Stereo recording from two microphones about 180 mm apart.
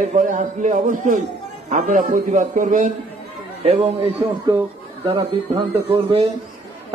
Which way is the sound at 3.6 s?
35° right (ahead or behind).